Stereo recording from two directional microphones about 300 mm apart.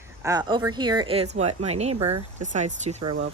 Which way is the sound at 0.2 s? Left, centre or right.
Centre.